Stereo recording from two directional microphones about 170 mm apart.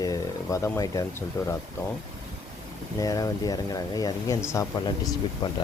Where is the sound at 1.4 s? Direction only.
20° left (ahead or behind).